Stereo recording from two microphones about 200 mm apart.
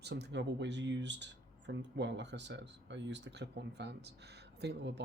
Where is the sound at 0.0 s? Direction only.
60° right (ahead or behind).